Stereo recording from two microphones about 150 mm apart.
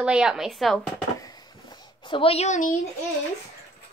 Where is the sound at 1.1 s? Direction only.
25° left (ahead or behind); by 2.7 s 55° left (ahead or behind).